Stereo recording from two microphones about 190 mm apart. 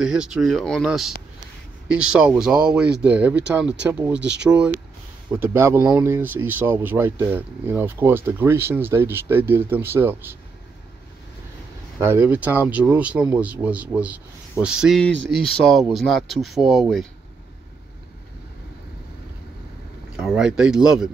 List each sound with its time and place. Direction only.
0.0 s speech: 5° right (ahead or behind)
4.2 s speech: 65° right (ahead or behind)
5.4 s speech: 15° right (ahead or behind)
12.0 s speech: 10° right (ahead or behind)
20.2 s speech: 5° right (ahead or behind)